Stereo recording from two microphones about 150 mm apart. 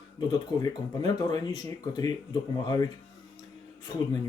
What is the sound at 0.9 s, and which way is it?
Speech, 25° left (ahead or behind).